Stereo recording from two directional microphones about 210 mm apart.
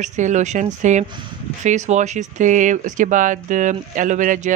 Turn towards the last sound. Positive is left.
turn(degrees=-35)  # may be behind; listen again after turning